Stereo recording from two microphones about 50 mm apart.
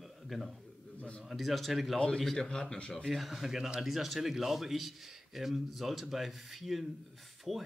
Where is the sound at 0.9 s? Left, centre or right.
Left.